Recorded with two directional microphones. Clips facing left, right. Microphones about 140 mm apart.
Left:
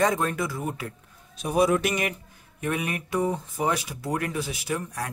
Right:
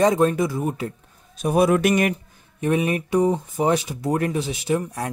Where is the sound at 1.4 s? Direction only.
55° right (ahead or behind).